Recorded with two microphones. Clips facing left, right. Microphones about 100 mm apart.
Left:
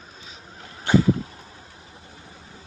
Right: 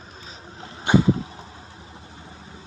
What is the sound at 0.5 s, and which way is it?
Vehicle, 20° right (ahead or behind).